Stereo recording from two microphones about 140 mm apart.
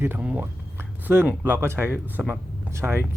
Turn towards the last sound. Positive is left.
turn(degrees=-20)  # may be behind; listen again after turning